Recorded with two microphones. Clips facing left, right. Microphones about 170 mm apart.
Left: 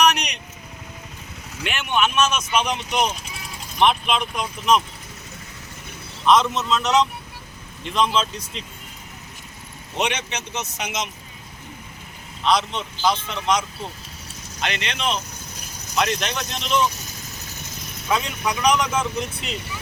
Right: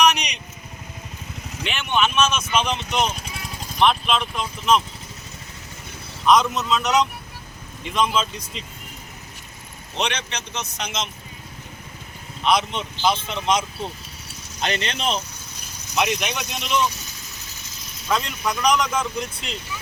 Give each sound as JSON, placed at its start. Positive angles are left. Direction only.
{"t": 1.6, "sound": "speech", "side_deg": 5}
{"t": 6.2, "sound": "speech", "side_deg": 0}
{"t": 9.9, "sound": "speech", "side_deg": 10}
{"t": 12.5, "sound": "speech", "side_deg": -20}
{"t": 14.6, "sound": "speech", "side_deg": -35}
{"t": 16.0, "sound": "speech", "side_deg": -10}
{"t": 18.1, "sound": "speech", "side_deg": 5}